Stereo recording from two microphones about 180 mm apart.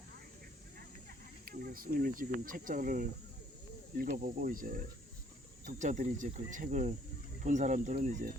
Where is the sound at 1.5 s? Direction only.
55° right (ahead or behind).